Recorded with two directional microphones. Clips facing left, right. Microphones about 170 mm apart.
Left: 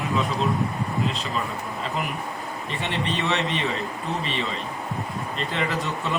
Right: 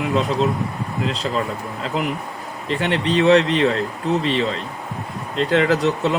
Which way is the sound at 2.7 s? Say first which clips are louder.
Right 8 dB; 90° right.